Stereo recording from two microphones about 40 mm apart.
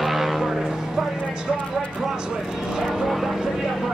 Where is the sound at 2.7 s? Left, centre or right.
Centre.